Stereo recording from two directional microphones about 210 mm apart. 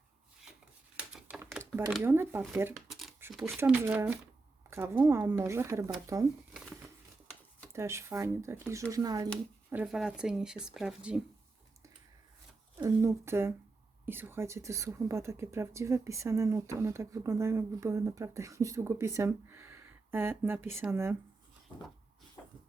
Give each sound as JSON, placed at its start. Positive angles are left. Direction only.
{"t": 0.9, "sound": "typewriter", "side_deg": -5}
{"t": 1.9, "sound": "a woman's voice", "side_deg": -10}
{"t": 2.9, "sound": "a sound", "side_deg": 0}
{"t": 3.2, "sound": "a sound", "side_deg": -10}
{"t": 3.6, "sound": "a woman's voice", "side_deg": -10}
{"t": 7.7, "sound": "a woman's voice", "side_deg": -15}
{"t": 9.6, "sound": "speech", "side_deg": -5}
{"t": 12.7, "sound": "a woman's voice", "side_deg": -15}